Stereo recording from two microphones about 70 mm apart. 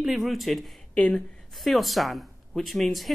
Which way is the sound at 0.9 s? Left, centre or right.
Centre.